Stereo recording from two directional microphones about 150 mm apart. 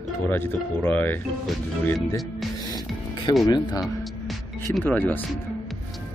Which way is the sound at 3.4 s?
30° left (ahead or behind).